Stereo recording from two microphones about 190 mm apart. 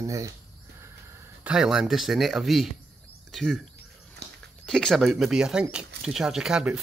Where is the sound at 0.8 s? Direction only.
15° right (ahead or behind).